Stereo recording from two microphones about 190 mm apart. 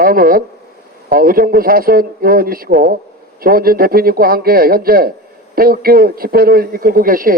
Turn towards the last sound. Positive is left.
turn(degrees=-50)  # may be behind; listen again after turning